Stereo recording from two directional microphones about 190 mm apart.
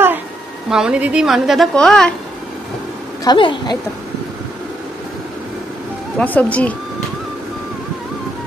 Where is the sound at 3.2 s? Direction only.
25° left (ahead or behind).